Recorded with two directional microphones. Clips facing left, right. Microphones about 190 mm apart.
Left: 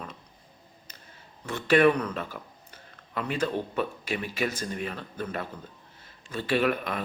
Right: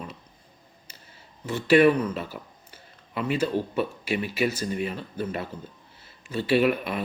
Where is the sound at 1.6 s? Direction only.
50° left (ahead or behind).